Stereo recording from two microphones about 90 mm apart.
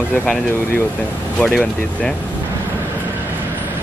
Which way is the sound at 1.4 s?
10° left (ahead or behind).